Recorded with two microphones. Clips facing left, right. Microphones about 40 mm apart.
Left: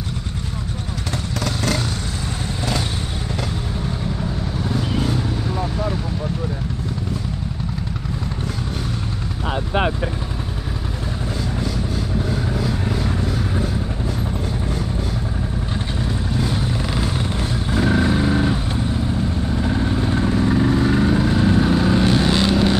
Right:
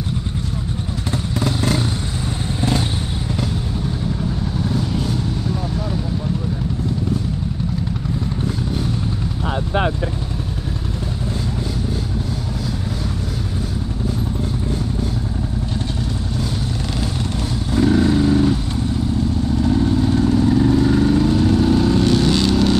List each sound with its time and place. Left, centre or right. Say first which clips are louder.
1.4 s vehicle: right 2 dB; centre
4.9 s vehicle: even; left
17.6 s vehicle: right 3 dB; left